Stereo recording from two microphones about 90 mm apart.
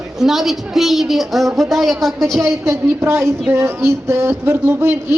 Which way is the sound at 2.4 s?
30° right (ahead or behind).